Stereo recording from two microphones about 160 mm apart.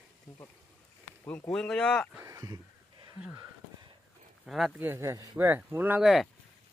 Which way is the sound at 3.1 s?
10° right (ahead or behind).